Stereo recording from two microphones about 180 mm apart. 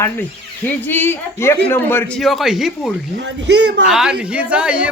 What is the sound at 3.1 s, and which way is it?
Speech, 70° right (ahead or behind).